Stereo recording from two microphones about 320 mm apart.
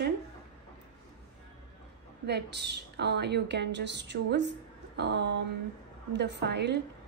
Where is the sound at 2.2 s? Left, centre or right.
Right.